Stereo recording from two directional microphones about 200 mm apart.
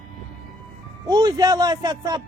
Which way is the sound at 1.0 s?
20° right (ahead or behind).